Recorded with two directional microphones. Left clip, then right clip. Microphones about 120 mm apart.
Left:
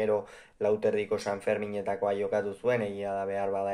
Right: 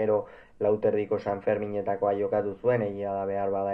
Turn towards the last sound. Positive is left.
turn(degrees=20)  # may be behind; listen again after turning